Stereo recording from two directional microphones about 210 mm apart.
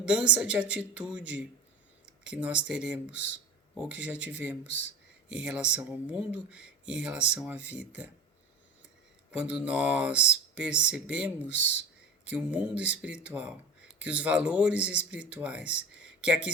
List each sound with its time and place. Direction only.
0.0 s speech: 5° right (ahead or behind)
3.1 s speech: 55° left (ahead or behind)
3.8 s speech: 5° right (ahead or behind)
4.6 s speech: 55° left (ahead or behind)
5.3 s speech: 5° right (ahead or behind)
9.4 s speech: 5° right (ahead or behind)
11.4 s speech: 55° left (ahead or behind)
12.3 s speech: 5° right (ahead or behind)